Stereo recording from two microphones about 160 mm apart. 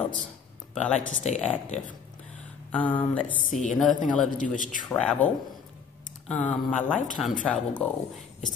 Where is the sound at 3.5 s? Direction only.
50° left (ahead or behind).